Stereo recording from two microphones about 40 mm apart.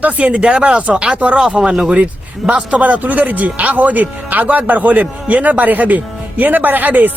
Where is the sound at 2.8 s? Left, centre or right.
Right.